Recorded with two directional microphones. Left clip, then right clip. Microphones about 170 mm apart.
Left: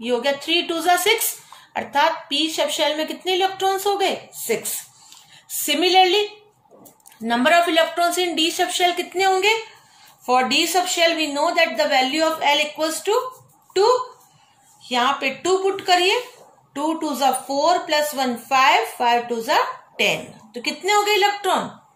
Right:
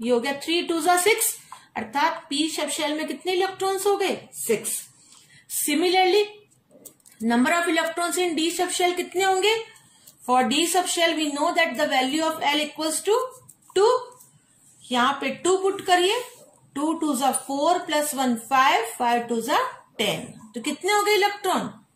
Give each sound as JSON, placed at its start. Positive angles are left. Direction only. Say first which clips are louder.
{"t": 0.0, "sound": "a woman's voice", "louder": "left 2 dB", "side_deg": -15}
{"t": 5.7, "sound": "a woman's voice", "louder": "left 4 dB", "side_deg": -10}
{"t": 7.2, "sound": "a woman's voice", "louder": "left 5 dB", "side_deg": -10}
{"t": 14.9, "sound": "a woman's voice", "louder": "left 3 dB", "side_deg": -25}